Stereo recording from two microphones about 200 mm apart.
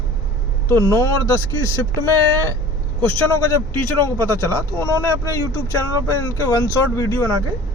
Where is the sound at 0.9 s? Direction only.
15° left (ahead or behind).